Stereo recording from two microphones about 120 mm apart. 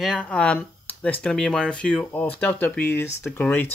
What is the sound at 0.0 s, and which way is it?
Speech, 5° left (ahead or behind).